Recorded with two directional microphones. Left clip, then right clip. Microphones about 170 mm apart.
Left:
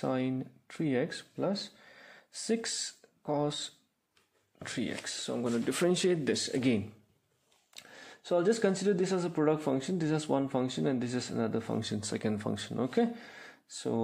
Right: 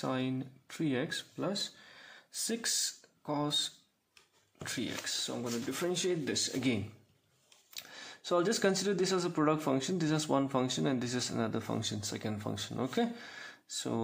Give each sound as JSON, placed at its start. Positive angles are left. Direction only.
{"t": 0.0, "sound": "speech", "side_deg": 25}
{"t": 7.7, "sound": "speech", "side_deg": 15}